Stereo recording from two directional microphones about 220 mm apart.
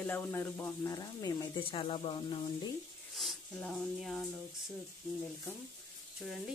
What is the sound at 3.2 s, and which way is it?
Speech, centre (ahead or behind).